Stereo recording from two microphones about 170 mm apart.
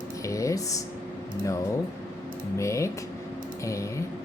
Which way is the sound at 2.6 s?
15° left (ahead or behind).